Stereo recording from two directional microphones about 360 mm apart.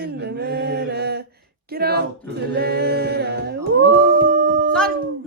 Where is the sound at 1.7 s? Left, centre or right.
Right.